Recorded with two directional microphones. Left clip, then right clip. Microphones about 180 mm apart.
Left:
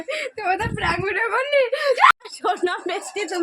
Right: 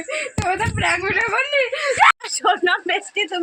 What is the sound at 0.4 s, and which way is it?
Speech, 10° right (ahead or behind).